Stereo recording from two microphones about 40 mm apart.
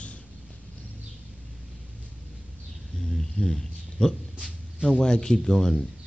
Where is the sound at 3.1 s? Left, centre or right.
Centre.